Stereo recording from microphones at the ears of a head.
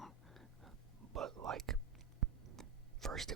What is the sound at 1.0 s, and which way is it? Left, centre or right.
Whispering, right.